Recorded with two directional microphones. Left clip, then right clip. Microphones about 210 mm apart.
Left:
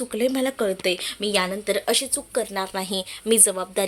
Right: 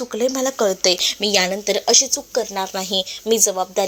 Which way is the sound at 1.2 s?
10° right (ahead or behind).